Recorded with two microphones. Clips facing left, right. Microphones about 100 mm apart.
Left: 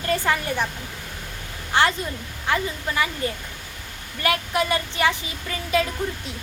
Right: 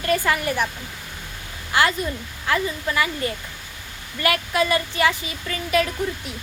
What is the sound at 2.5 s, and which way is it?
Speech, 25° left (ahead or behind).